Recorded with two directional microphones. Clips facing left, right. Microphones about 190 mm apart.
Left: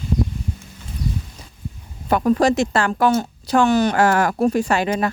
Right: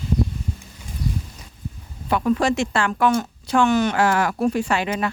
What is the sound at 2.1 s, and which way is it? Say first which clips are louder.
Speech: left 3 dB; 40° left (ahead or behind).